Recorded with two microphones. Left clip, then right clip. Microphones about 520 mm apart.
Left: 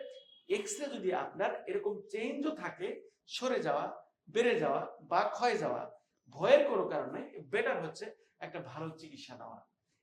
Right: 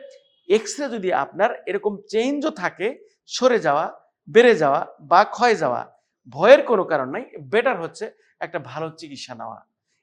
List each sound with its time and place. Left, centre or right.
0.4 s speech: right